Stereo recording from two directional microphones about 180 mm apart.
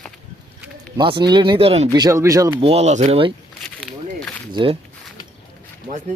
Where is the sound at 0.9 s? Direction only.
25° right (ahead or behind).